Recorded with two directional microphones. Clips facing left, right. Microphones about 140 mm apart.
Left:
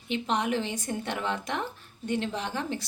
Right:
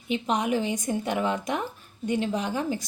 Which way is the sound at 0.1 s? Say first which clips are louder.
Right 2 dB; 15° right (ahead or behind).